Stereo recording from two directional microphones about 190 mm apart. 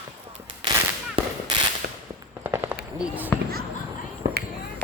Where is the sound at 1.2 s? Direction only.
30° right (ahead or behind).